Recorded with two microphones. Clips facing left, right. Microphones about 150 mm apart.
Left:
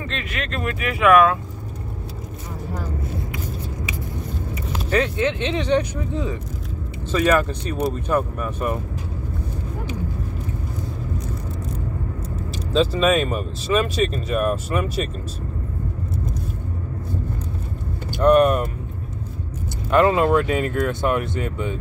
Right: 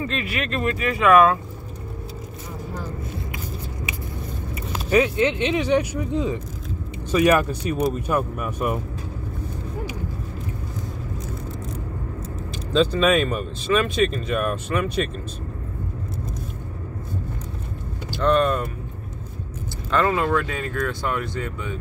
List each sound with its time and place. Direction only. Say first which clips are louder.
0.1 s speech: right 2 dB; 5° right (ahead or behind)
4.9 s speech: right 2 dB; 10° right (ahead or behind)
12.7 s speech: even; centre (ahead or behind)
18.2 s speech: left 5 dB; 15° left (ahead or behind)
19.9 s speech: left 4 dB; 20° left (ahead or behind)